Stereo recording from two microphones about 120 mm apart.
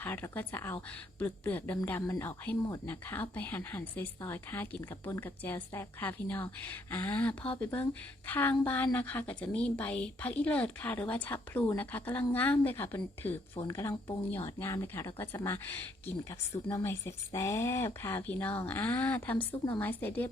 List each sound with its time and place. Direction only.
0.0 s a woman's voice: 15° left (ahead or behind)
2.9 s a woman's voice: 15° left (ahead or behind)